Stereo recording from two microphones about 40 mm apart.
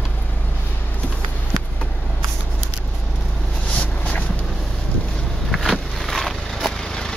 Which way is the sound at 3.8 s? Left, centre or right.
Left.